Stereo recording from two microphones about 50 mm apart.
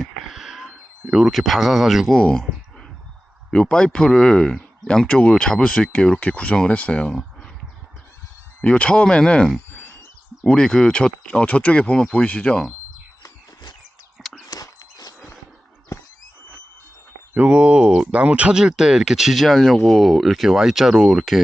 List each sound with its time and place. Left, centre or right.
0.0 s a sound: centre
1.1 s speech: centre
2.0 s speech: centre
3.5 s speech: centre
5.0 s speech: left
5.3 s speech: centre
7.0 s a sound: centre
8.6 s speech: left
14.2 s a sound: centre
17.3 s speech: right
18.6 s speech: centre